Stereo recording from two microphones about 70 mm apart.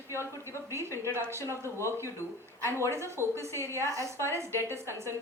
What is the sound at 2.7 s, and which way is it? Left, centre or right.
Speech, right.